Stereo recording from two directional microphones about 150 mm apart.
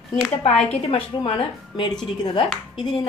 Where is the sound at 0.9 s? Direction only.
40° left (ahead or behind).